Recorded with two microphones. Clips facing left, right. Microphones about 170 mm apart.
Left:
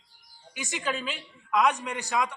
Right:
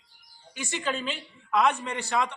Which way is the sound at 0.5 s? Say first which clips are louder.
Right 1 dB; 10° left (ahead or behind).